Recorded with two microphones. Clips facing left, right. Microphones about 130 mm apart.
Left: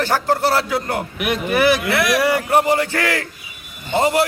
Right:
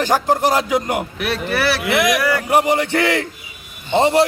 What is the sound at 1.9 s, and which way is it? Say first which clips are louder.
Speech: right 2 dB; 20° right (ahead or behind).